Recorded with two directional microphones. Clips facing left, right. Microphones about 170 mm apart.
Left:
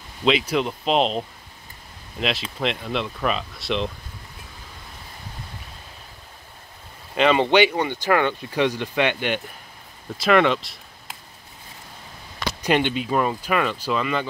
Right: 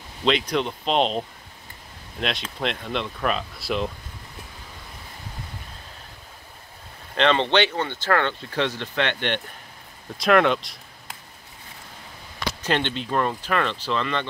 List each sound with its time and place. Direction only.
0.2 s speech: 5° left (ahead or behind)
7.2 s speech: 10° left (ahead or behind)
12.6 s speech: 10° left (ahead or behind)